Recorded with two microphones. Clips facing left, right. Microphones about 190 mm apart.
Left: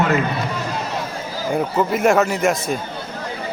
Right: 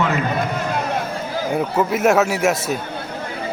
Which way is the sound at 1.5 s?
Centre (ahead or behind).